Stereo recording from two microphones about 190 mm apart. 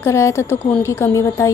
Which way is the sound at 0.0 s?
15° left (ahead or behind).